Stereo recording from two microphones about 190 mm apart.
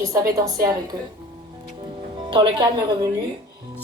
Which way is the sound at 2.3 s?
25° right (ahead or behind).